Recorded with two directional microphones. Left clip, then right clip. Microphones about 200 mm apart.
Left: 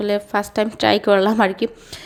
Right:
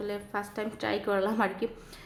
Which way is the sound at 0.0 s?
40° left (ahead or behind).